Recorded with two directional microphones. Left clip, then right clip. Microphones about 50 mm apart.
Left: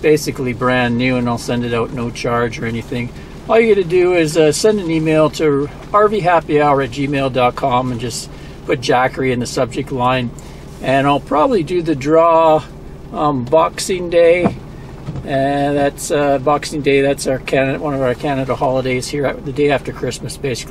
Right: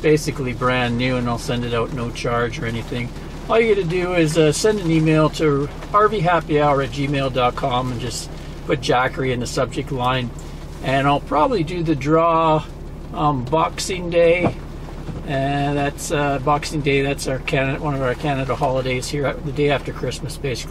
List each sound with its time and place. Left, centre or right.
0.1 s speech: left
0.4 s speech: centre
4.6 s speech: centre
13.7 s speech: left